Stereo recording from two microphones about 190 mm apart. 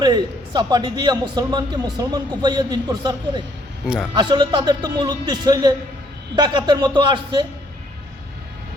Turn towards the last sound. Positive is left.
turn(degrees=-25)  # may be behind; listen again after turning